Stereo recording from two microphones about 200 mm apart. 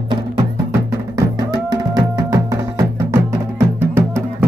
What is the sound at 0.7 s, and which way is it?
Music, 15° right (ahead or behind).